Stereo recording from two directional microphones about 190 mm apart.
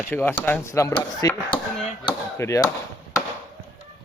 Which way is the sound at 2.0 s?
15° left (ahead or behind).